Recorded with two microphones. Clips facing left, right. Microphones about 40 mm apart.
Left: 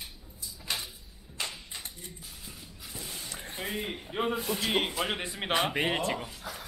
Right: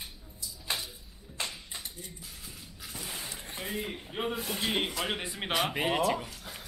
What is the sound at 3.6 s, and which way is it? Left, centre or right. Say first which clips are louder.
Speech: left 1 dB; centre.